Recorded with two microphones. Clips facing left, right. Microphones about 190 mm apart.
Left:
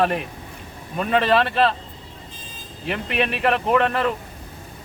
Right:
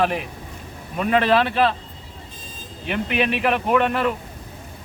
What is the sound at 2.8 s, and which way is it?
Speech, centre (ahead or behind).